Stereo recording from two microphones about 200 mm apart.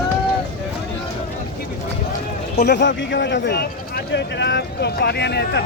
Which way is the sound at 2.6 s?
60° left (ahead or behind).